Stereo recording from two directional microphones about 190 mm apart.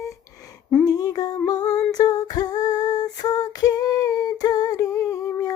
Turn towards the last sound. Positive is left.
turn(degrees=15)  # may be behind; listen again after turning